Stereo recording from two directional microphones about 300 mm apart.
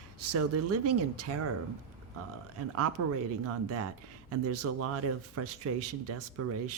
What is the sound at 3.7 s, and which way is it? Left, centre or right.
Speech, right.